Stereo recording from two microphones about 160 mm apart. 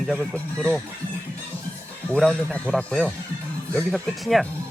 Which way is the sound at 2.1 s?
Centre (ahead or behind).